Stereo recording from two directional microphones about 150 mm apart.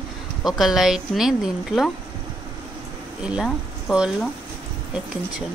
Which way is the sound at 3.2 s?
5° right (ahead or behind).